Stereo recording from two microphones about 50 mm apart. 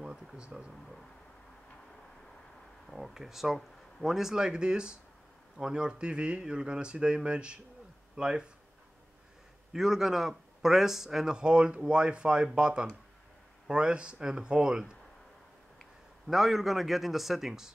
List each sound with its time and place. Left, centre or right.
0.0 s a sound: centre
2.9 s a man's voice: centre
9.7 s a man's voice: centre
16.3 s a man's voice: centre